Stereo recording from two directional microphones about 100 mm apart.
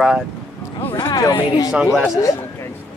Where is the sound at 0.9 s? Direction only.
45° left (ahead or behind).